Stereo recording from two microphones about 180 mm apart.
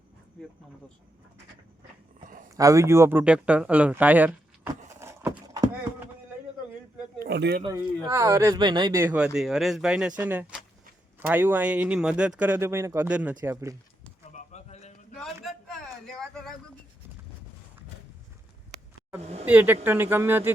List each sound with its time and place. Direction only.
0.4 s speech: 5° left (ahead or behind)
2.6 s speech: 20° right (ahead or behind)
4.9 s horse: 15° right (ahead or behind)
7.2 s a sound: 70° right (ahead or behind)
7.6 s speech: 20° right (ahead or behind)
9.0 s speech: 5° right (ahead or behind)
14.3 s a sound: 40° left (ahead or behind)
15.1 s a sound: centre (ahead or behind)
19.2 s speech: 35° right (ahead or behind)
19.5 s speech: 10° right (ahead or behind)